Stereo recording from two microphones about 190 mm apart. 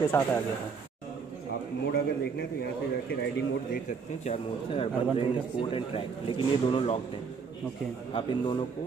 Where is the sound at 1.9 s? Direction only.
55° left (ahead or behind).